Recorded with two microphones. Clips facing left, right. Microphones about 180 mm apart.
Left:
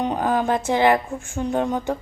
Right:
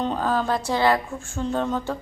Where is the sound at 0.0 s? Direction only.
15° left (ahead or behind).